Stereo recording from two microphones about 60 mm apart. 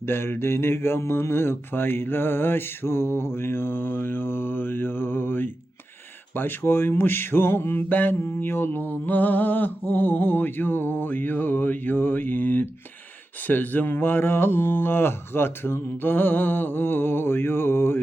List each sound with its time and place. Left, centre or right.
0.0 s speech: left